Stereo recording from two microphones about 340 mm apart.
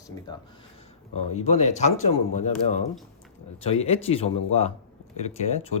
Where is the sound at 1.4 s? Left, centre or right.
Centre.